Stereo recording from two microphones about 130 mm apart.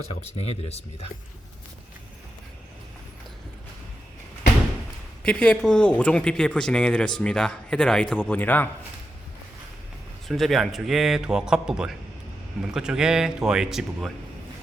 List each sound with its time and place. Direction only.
0.2 s speech: 50° left (ahead or behind)
5.2 s speech: 10° left (ahead or behind)
10.2 s a man's voice: centre (ahead or behind)